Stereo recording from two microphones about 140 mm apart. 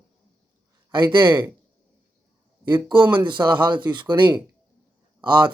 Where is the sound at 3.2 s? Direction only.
35° right (ahead or behind).